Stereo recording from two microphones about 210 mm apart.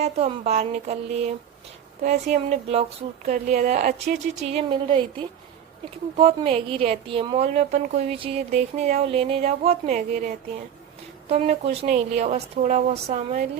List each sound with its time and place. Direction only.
0.0 s a woman's voice: 30° right (ahead or behind)
2.0 s a woman's voice: 35° right (ahead or behind)
6.1 s a woman's voice: 25° right (ahead or behind)